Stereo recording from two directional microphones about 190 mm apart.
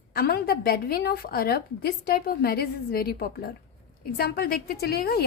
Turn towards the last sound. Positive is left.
turn(degrees=55)  # may be behind; listen again after turning